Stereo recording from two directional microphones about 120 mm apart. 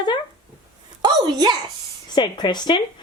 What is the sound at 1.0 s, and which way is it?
Speech, 35° right (ahead or behind).